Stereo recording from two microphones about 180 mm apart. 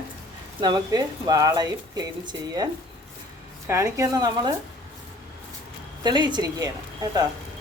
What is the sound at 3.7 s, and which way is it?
Speech, 15° right (ahead or behind).